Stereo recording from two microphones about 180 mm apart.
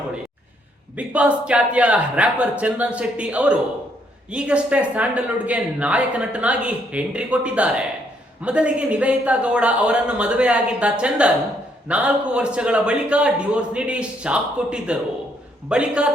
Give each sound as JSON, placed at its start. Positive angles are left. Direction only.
{"t": 0.9, "sound": "a man's voice", "side_deg": -5}